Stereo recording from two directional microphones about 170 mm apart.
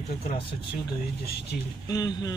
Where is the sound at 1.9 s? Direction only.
20° left (ahead or behind).